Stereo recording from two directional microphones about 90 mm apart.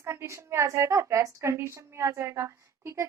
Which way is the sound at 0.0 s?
30° right (ahead or behind).